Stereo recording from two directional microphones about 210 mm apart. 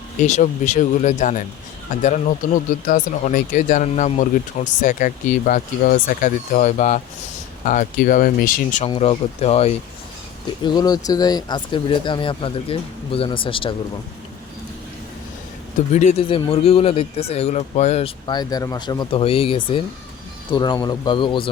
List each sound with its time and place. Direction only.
0.2 s speech: 35° left (ahead or behind)
8.8 s speech: 30° left (ahead or behind)
10.6 s speech: 20° left (ahead or behind)
15.9 s speech: 35° left (ahead or behind)